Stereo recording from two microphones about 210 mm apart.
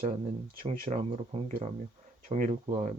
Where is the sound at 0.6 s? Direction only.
35° right (ahead or behind).